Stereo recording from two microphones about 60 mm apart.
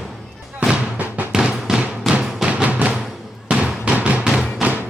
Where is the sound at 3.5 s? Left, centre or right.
Centre.